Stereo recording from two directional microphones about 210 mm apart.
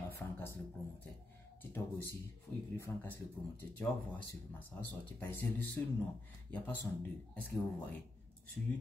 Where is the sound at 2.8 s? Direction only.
10° left (ahead or behind).